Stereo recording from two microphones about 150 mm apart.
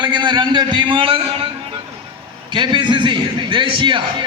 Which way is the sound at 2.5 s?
30° right (ahead or behind).